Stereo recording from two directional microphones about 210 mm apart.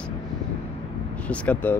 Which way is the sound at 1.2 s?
5° left (ahead or behind).